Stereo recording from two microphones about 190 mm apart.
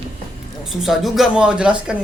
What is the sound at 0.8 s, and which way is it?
A man's voice, centre (ahead or behind).